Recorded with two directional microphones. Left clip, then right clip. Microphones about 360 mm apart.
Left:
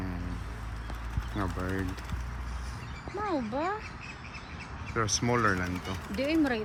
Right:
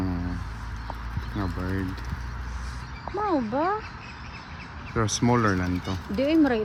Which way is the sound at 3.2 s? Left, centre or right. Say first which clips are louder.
Right 6 dB; right.